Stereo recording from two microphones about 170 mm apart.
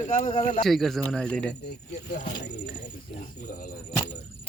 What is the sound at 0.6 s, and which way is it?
Speech, centre (ahead or behind).